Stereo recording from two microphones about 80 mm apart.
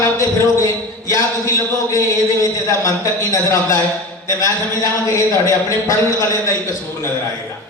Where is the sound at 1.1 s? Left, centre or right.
Left.